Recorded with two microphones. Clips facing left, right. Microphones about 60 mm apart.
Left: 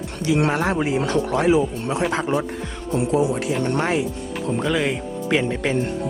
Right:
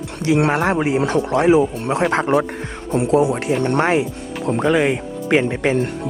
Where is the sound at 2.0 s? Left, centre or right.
Right.